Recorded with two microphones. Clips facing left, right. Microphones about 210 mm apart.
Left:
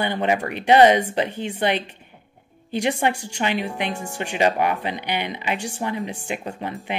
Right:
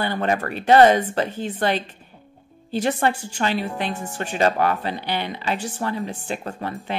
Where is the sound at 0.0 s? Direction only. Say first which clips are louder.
Left 1 dB; 15° left (ahead or behind).